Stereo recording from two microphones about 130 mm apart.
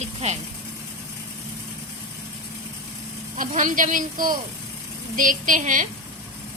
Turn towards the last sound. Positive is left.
turn(degrees=-85)